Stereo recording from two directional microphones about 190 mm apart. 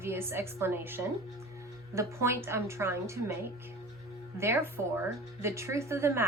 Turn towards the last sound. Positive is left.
turn(degrees=-15)  # may be behind; listen again after turning